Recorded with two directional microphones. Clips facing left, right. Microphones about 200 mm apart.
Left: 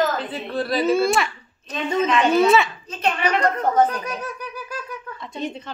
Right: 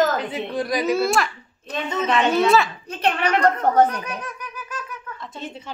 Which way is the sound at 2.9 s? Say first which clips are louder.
Right 1 dB; 60° right (ahead or behind).